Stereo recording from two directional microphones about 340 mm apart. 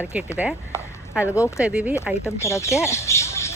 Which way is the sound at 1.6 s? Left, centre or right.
Centre.